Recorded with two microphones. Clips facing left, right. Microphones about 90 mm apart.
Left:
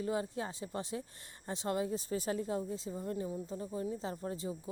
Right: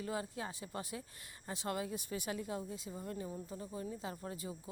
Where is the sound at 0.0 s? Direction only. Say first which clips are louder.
Left 5 dB; 30° left (ahead or behind).